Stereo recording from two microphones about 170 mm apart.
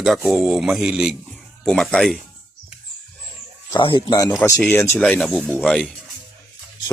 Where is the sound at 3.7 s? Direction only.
25° left (ahead or behind).